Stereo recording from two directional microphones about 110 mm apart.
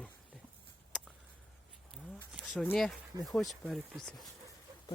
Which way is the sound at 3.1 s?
45° right (ahead or behind).